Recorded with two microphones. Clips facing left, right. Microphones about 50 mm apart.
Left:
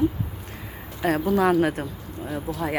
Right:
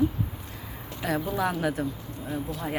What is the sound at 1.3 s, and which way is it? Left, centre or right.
Speech, left.